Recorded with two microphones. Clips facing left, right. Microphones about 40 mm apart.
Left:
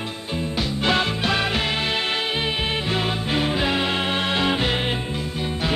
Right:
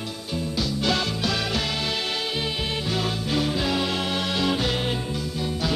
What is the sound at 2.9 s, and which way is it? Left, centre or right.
Music, left.